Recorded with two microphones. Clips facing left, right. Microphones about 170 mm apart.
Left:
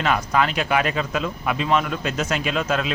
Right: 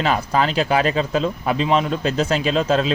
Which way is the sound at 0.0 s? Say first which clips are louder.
Right 2 dB; 30° right (ahead or behind).